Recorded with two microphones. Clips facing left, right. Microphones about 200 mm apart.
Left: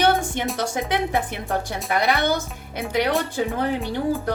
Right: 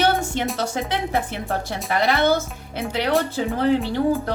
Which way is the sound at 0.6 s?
15° left (ahead or behind).